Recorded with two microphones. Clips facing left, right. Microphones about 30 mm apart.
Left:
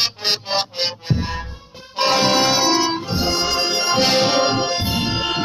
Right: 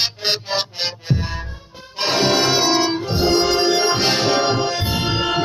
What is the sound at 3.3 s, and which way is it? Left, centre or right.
Music, right.